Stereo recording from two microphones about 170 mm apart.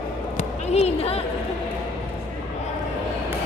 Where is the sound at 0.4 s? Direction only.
40° left (ahead or behind).